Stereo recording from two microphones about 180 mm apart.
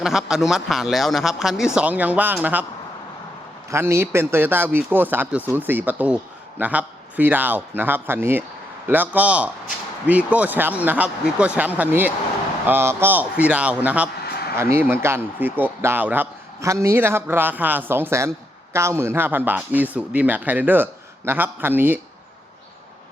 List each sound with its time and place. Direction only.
0.0 s a man's voice: 5° right (ahead or behind)
3.7 s a man's voice: 15° right (ahead or behind)
14.3 s a sound: 60° left (ahead or behind)
14.5 s a man's voice: 15° right (ahead or behind)